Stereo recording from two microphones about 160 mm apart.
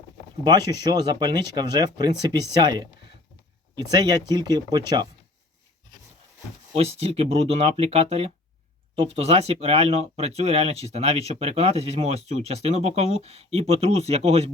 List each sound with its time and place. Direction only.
1.2 s speech: 25° right (ahead or behind)
3.9 s speech: 25° right (ahead or behind)
6.7 s speech: 40° right (ahead or behind)